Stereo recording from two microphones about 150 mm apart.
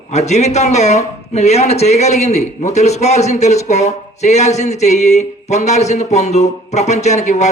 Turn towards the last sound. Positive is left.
turn(degrees=50)  # may be behind; listen again after turning